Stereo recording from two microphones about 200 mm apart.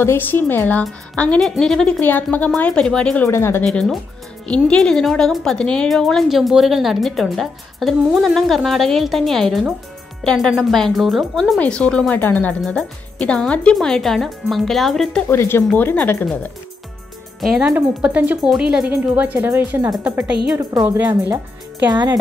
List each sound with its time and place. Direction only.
0.0 s a woman's voice: 10° left (ahead or behind)
3.6 s a woman's voice: centre (ahead or behind)
15.2 s a woman's voice: 10° left (ahead or behind)
17.4 s speech: 5° right (ahead or behind); by 22.2 s 20° right (ahead or behind)